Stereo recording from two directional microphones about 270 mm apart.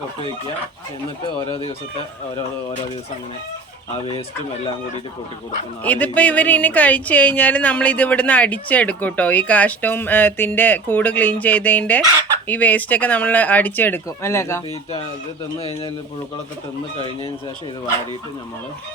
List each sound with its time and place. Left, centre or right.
1.5 s speech: centre
5.8 s speech: centre
15.5 s speech: left